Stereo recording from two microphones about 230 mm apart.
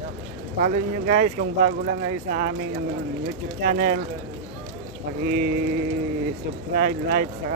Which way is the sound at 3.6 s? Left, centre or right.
Right.